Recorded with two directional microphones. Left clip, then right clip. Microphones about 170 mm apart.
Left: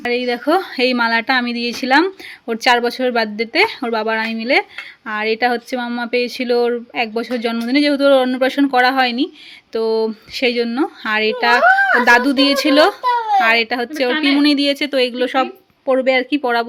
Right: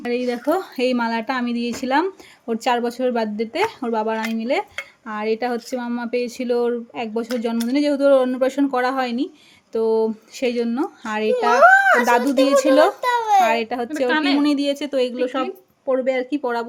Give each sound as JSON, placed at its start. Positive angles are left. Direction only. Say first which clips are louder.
{"t": 0.0, "sound": "a woman's voice", "louder": "left 4 dB", "side_deg": 5}
{"t": 13.0, "sound": "a sound", "louder": "left 2 dB", "side_deg": -35}
{"t": 13.4, "sound": "a woman's voice", "louder": "left 4 dB", "side_deg": 5}
{"t": 15.9, "sound": "speech", "louder": "left 5 dB", "side_deg": 20}
{"t": 16.3, "sound": "speech", "louder": "left 6 dB", "side_deg": 5}